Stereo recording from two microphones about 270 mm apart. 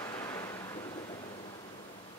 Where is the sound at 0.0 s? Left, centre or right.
Centre.